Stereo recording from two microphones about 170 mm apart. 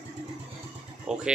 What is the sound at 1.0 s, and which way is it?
Speech, 5° right (ahead or behind).